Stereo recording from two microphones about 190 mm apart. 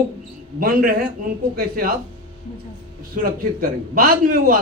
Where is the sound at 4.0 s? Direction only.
50° right (ahead or behind).